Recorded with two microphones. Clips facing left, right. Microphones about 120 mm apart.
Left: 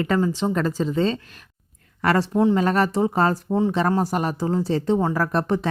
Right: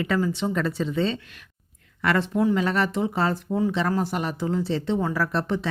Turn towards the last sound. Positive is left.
turn(degrees=45)  # may be behind; listen again after turning